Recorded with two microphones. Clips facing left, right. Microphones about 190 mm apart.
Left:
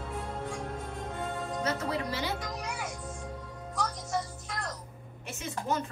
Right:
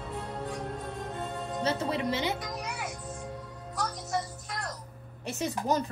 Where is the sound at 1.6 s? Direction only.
30° right (ahead or behind).